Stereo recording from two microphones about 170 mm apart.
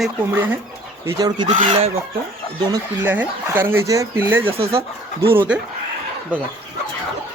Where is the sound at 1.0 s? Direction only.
25° right (ahead or behind).